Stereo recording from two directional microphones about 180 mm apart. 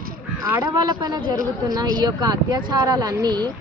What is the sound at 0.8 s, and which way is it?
A woman's voice, 25° right (ahead or behind).